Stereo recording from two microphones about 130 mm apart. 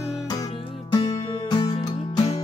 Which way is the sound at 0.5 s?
45° left (ahead or behind).